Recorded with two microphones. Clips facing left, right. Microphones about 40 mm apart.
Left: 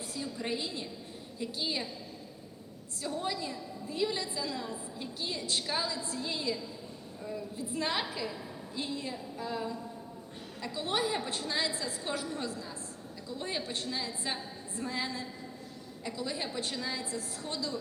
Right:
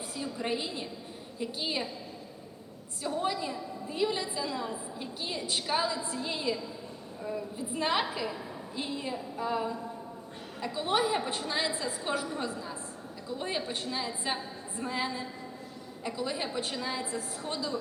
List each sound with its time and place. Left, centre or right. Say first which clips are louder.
0.2 s a woman's voice: right 2 dB; centre
3.0 s a woman's voice: right 4 dB; centre